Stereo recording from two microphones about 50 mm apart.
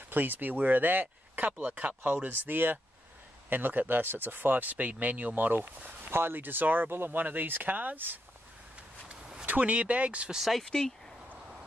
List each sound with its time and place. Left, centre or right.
0.1 s speech: right
9.1 s a sound: centre
9.5 s speech: right
10.3 s speech: centre
10.6 s speech: centre